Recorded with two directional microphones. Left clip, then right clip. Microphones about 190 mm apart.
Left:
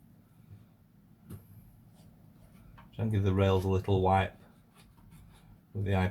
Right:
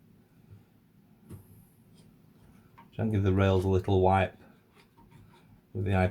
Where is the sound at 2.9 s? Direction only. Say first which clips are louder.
Right 2 dB; 50° right (ahead or behind).